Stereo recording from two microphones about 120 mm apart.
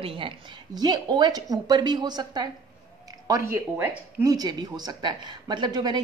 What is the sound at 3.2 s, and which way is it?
Speech, 25° right (ahead or behind).